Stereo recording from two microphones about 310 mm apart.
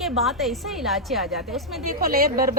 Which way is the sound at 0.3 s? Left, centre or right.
Centre.